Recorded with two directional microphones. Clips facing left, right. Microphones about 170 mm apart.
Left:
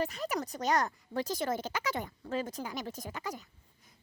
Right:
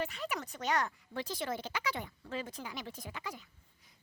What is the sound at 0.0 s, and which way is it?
A child's voice, 40° left (ahead or behind).